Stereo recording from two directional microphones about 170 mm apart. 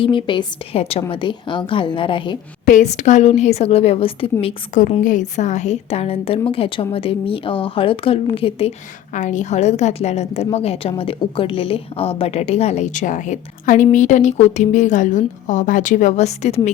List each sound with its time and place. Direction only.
0.0 s a woman's voice: 30° left (ahead or behind)
2.6 s a woman's voice: 45° left (ahead or behind)
4.8 s a woman's voice: 50° left (ahead or behind)
9.1 s a woman's voice: 45° left (ahead or behind)